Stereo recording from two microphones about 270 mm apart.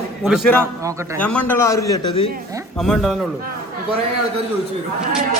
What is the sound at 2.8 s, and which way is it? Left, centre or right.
Speech, centre.